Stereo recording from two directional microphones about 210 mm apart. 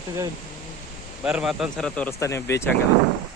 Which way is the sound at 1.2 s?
5° right (ahead or behind).